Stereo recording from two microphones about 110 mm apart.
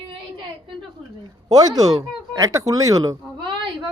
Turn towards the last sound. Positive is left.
turn(degrees=-35)  # may be behind; listen again after turning